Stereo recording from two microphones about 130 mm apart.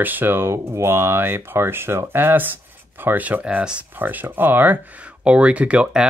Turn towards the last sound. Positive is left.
turn(degrees=-10)  # may be behind; listen again after turning